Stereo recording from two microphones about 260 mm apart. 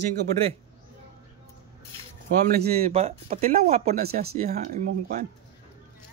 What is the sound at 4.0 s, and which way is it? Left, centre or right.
Speech, right.